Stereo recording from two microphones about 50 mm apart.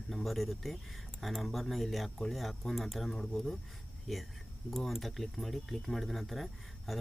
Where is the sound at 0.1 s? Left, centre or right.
Centre.